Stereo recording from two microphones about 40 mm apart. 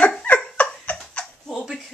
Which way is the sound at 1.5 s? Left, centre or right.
Centre.